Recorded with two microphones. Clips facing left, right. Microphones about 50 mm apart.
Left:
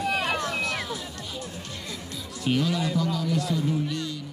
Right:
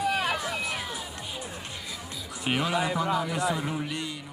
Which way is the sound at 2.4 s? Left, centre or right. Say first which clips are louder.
Left 1 dB; right.